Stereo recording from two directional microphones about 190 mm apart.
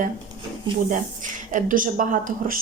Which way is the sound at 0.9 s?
40° right (ahead or behind).